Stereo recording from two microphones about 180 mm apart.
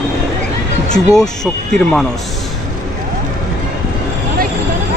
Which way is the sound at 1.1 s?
5° left (ahead or behind).